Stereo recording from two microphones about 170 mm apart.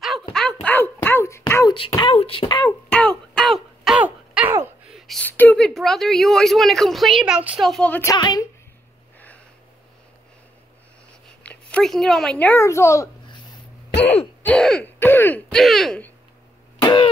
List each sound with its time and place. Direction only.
0.3 s a sound: 5° left (ahead or behind); by 1.8 s 20° left (ahead or behind)
1.8 s speech: 30° left (ahead or behind)
2.9 s a sound: 5° left (ahead or behind)
8.1 s a woman's voice: 25° left (ahead or behind)
11.4 s a woman's voice: 5° left (ahead or behind)
13.9 s throat clearing: 35° left (ahead or behind)
14.4 s speech: 5° left (ahead or behind)
16.8 s cough: 30° left (ahead or behind)